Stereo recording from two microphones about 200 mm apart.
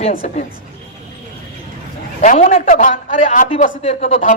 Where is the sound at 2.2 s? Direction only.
40° left (ahead or behind).